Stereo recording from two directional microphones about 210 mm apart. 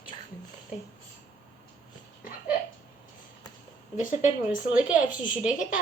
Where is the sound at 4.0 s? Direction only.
40° left (ahead or behind).